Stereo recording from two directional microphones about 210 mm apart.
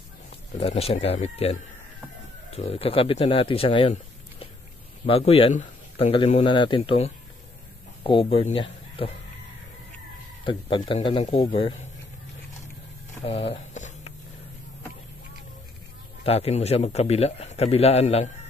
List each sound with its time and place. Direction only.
0.6 s a man's voice: 30° left (ahead or behind)
10.4 s a man's voice: 25° left (ahead or behind)
13.2 s a sound: 30° left (ahead or behind)
16.3 s a man's voice: 30° left (ahead or behind)